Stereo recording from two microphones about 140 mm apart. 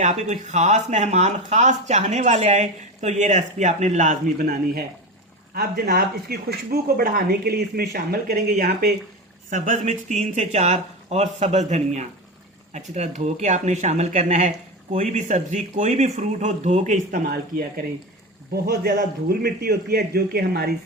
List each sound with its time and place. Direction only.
0.0 s speech: 55° right (ahead or behind); by 8.9 s 90° right
9.5 s speech: 65° right (ahead or behind); by 20.7 s 90° right